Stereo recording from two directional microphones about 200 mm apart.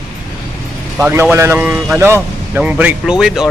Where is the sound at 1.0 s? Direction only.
10° right (ahead or behind).